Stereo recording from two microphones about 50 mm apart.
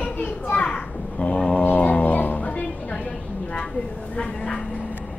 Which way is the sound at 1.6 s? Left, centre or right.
Left.